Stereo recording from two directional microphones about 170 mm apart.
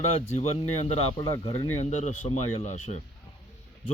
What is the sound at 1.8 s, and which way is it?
Speech, 40° left (ahead or behind).